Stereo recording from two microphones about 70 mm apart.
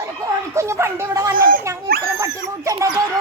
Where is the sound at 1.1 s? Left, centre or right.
Right.